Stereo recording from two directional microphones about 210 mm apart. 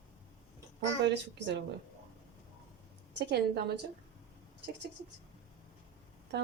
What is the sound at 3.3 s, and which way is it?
Speech, 55° right (ahead or behind).